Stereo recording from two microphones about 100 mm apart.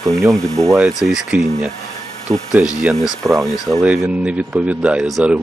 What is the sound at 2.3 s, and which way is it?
Speech, 25° right (ahead or behind).